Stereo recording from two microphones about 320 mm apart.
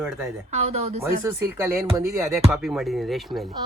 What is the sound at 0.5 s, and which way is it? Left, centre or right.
A woman's voice, centre.